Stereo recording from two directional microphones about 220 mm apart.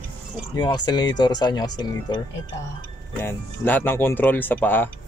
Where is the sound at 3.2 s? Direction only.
10° left (ahead or behind).